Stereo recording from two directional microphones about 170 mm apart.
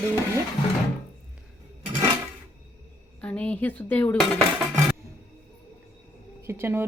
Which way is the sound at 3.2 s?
5° left (ahead or behind).